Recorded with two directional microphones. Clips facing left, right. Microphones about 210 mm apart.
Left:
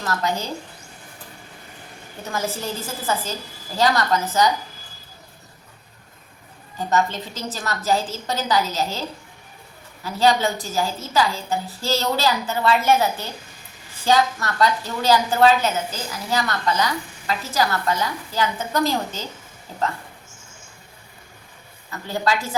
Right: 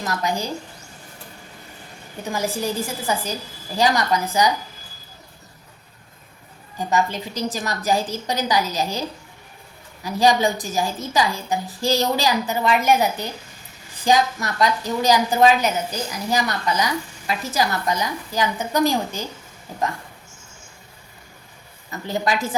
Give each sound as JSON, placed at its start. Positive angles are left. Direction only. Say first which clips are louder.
{"t": 0.0, "sound": "a woman's voice", "louder": "even", "side_deg": -15}
{"t": 2.3, "sound": "a woman's voice", "louder": "right 3 dB", "side_deg": -15}
{"t": 6.7, "sound": "a woman's voice", "louder": "even", "side_deg": -10}
{"t": 21.8, "sound": "a woman's voice", "louder": "even", "side_deg": -20}